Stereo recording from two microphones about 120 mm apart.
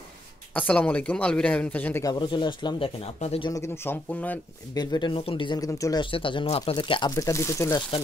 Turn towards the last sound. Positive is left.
turn(degrees=25)  # may be behind; listen again after turning